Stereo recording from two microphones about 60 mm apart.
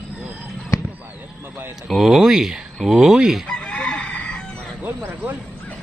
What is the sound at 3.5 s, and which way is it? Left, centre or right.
Chicken, centre.